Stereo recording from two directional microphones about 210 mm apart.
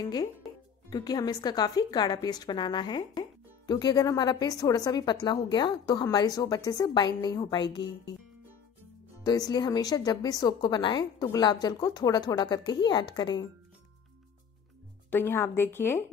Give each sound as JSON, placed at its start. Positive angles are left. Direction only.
{"t": 0.8, "sound": "a woman's voice", "side_deg": 20}
{"t": 9.2, "sound": "a woman's voice", "side_deg": 20}
{"t": 15.0, "sound": "a woman's voice", "side_deg": 10}